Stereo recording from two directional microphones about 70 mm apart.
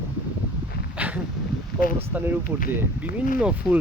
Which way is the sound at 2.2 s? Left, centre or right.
Right.